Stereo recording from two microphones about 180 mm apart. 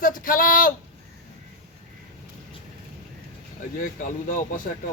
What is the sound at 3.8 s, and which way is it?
Speech, 45° left (ahead or behind).